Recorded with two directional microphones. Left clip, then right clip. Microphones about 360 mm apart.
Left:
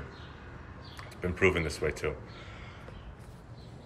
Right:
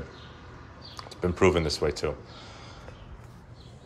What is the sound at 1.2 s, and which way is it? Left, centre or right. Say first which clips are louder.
Speech: right 4 dB; right.